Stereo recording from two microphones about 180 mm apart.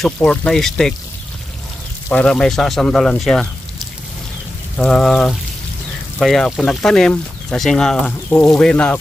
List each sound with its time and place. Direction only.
0.0 s speech: 5° left (ahead or behind)
2.0 s speech: 5° left (ahead or behind)
4.7 s speech: 5° left (ahead or behind)